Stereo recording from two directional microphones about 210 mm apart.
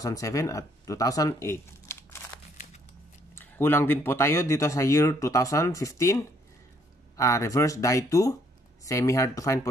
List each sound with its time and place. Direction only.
0.0 s speech: 15° left (ahead or behind)
2.5 s crumpling: 35° left (ahead or behind)
3.3 s speech: 10° left (ahead or behind)